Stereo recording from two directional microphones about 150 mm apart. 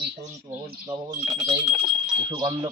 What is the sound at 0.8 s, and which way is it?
Speech, 25° right (ahead or behind).